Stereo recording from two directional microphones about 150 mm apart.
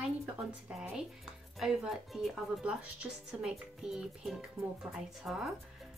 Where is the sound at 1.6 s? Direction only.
Centre (ahead or behind).